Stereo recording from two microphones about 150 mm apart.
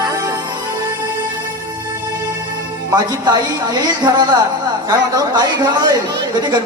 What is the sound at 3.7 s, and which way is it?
Speech, 25° right (ahead or behind).